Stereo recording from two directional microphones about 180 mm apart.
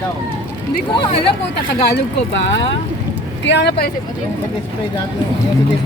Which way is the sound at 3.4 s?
70° left (ahead or behind).